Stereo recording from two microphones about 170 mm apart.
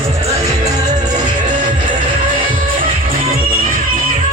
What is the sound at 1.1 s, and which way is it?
Music, 45° right (ahead or behind).